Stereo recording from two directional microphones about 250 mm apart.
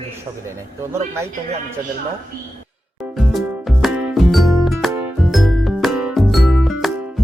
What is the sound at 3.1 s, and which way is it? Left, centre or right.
Music, centre.